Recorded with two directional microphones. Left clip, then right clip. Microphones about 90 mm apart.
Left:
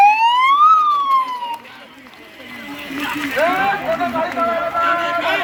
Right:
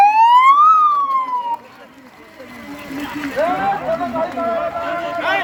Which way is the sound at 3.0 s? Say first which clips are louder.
Left 2 dB; 30° right (ahead or behind).